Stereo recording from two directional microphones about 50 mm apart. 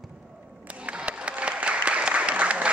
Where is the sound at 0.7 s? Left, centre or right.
Right.